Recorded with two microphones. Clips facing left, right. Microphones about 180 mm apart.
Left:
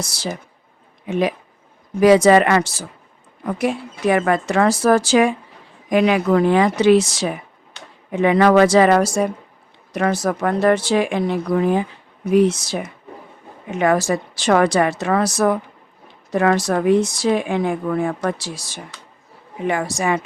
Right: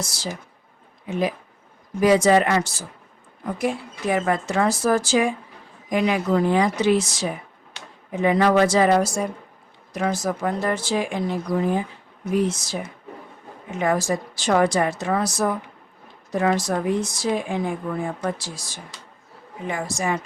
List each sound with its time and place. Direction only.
0.0 s speech: 70° left (ahead or behind)